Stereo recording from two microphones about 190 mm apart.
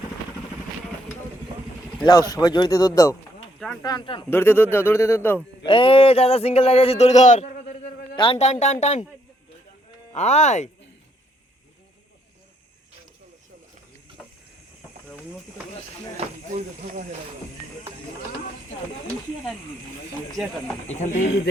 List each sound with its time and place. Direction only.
2.0 s speech: 20° left (ahead or behind)
4.3 s speech: 10° left (ahead or behind)
5.6 s speech: 25° left (ahead or behind)
8.1 s a man's voice: 25° left (ahead or behind)
8.4 s speech: 35° left (ahead or behind)
10.1 s speech: 35° left (ahead or behind)
16.5 s speech: 40° right (ahead or behind)
20.3 s speech: centre (ahead or behind)
20.8 s speech: 40° left (ahead or behind)